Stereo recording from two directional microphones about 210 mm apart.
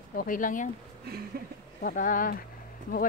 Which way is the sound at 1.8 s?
40° left (ahead or behind).